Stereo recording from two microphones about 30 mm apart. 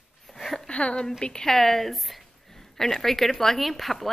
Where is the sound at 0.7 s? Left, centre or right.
Left.